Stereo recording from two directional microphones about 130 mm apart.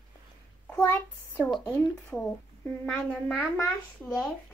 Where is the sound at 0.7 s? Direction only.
15° left (ahead or behind).